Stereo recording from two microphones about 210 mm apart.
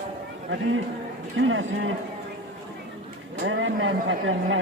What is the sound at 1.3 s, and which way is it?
Speech, 65° right (ahead or behind).